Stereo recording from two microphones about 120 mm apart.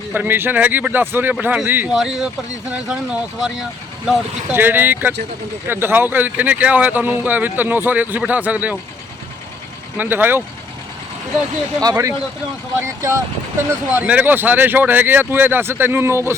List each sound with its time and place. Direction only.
0.1 s speech: 15° right (ahead or behind)
2.0 s speech: 5° right (ahead or behind)
4.5 s speech: 15° right (ahead or behind)
10.0 s speech: 15° right (ahead or behind)
11.8 s speech: 30° right (ahead or behind)